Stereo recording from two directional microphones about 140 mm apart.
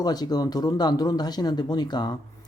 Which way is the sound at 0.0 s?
30° left (ahead or behind).